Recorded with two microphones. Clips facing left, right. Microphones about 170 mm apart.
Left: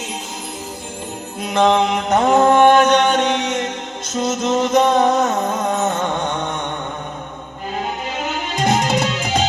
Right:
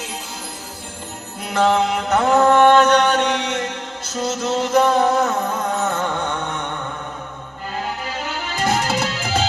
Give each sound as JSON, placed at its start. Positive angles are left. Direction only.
{"t": 1.4, "sound": "music", "side_deg": 20}
{"t": 7.8, "sound": "music", "side_deg": 20}